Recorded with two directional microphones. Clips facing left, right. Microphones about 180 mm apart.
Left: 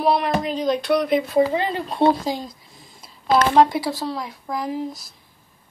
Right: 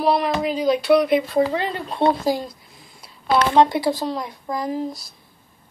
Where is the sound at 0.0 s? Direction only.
Centre (ahead or behind).